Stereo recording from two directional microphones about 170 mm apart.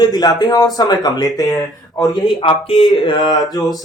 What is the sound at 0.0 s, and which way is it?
Speech, 20° left (ahead or behind).